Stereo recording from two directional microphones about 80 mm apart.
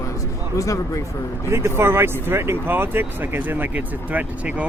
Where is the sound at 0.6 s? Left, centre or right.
Left.